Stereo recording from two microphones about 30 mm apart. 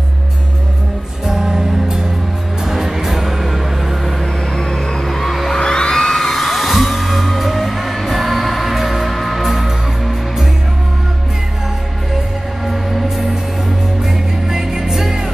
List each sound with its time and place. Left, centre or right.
1.2 s music: centre
4.6 s music: centre
5.6 s music: left; by 9.1 s centre
9.1 s music: centre
12.6 s music: centre
14.5 s music: centre